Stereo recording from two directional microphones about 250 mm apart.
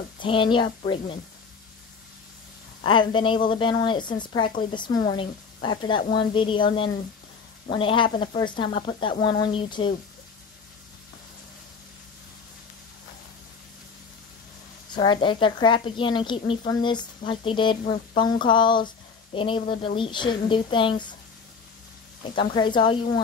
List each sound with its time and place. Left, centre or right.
0.2 s a woman's voice: centre
2.8 s a woman's voice: centre
4.5 s speech: left
4.7 s a woman's voice: centre
14.9 s a woman's voice: centre
22.2 s a woman's voice: centre